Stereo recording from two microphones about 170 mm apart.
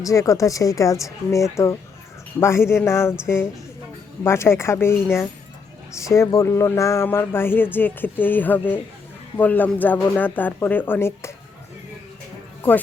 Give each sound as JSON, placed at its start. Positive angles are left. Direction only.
{"t": 0.0, "sound": "speech", "side_deg": 20}
{"t": 6.0, "sound": "speech", "side_deg": 15}